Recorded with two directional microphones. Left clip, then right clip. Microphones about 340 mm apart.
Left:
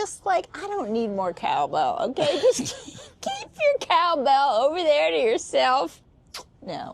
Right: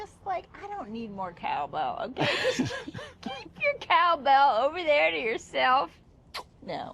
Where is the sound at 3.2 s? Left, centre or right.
Left.